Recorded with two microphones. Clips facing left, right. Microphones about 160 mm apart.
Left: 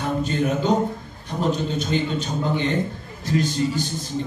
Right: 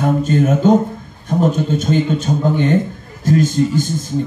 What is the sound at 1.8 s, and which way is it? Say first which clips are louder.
A man's voice: right 7 dB; 45° right (ahead or behind).